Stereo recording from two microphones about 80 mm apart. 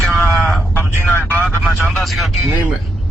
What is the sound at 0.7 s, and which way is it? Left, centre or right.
Speech, left.